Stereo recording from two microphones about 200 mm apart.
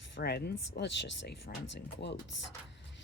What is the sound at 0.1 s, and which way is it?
Speech, 55° left (ahead or behind).